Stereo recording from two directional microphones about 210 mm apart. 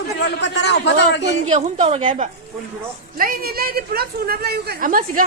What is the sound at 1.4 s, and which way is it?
Speech, 30° right (ahead or behind).